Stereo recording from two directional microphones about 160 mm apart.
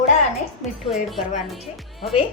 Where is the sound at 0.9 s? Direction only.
Centre (ahead or behind).